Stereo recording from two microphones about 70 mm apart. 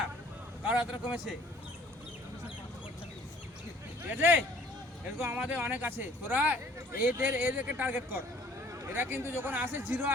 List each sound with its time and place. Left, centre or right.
0.6 s speech: centre
4.1 s speech: right